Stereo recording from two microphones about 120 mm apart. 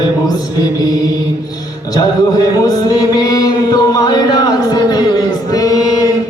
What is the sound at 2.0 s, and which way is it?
Chant, 30° left (ahead or behind).